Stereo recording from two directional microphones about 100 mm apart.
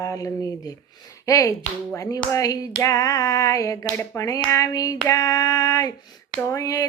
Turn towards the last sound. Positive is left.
turn(degrees=35)  # may be behind; listen again after turning